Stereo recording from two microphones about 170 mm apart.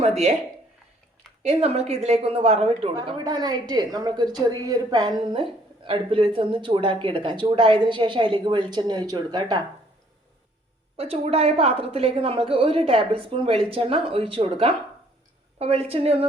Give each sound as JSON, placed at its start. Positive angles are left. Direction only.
{"t": 1.4, "sound": "a woman's voice", "side_deg": -35}
{"t": 2.9, "sound": "a woman's voice", "side_deg": -25}
{"t": 10.9, "sound": "a woman's voice", "side_deg": -35}